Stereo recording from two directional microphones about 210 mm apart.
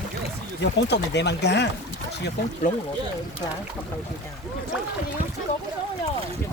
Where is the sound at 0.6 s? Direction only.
55° left (ahead or behind).